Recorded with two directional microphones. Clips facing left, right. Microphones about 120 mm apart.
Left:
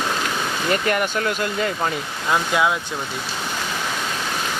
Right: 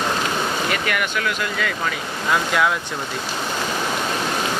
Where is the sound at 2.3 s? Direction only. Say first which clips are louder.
Even; 20° left (ahead or behind).